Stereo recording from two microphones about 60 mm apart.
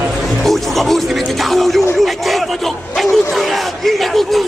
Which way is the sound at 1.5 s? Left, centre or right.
Centre.